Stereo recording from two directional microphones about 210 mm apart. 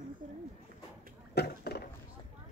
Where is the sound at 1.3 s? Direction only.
50° left (ahead or behind).